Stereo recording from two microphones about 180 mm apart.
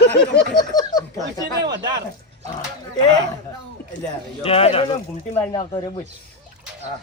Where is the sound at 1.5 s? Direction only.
70° right (ahead or behind).